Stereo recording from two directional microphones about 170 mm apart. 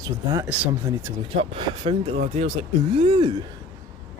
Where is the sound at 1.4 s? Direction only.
35° right (ahead or behind).